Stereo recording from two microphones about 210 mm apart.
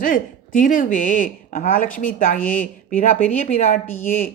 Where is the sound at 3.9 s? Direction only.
10° left (ahead or behind).